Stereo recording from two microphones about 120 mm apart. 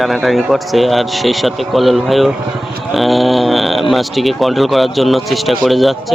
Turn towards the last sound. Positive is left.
turn(degrees=0)  # may be behind; listen again after turning